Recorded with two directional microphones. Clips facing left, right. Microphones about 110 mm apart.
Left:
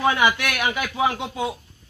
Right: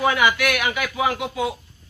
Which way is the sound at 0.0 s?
25° left (ahead or behind).